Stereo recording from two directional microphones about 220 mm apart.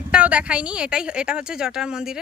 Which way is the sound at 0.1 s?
5° right (ahead or behind).